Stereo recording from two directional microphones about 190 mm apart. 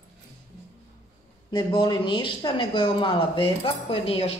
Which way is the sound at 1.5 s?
20° left (ahead or behind).